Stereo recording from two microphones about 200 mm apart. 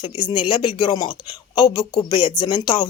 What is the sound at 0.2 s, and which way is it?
Speech, 25° left (ahead or behind).